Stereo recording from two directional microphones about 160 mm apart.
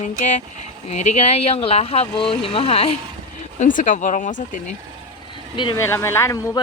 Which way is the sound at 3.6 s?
55° left (ahead or behind).